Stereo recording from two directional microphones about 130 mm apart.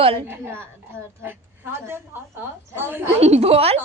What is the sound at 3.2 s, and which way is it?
Speech, 55° right (ahead or behind).